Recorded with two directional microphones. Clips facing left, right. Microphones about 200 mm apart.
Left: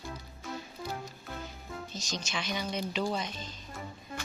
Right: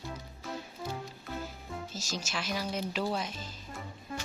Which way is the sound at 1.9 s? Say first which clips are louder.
Left 1 dB; 5° right (ahead or behind).